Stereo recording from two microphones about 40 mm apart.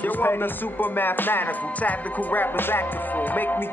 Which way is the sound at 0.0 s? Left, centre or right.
Left.